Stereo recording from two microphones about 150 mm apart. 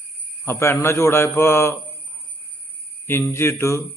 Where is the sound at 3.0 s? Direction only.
15° left (ahead or behind).